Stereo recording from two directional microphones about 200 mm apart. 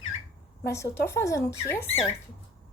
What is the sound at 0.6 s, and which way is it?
Speech, 55° left (ahead or behind).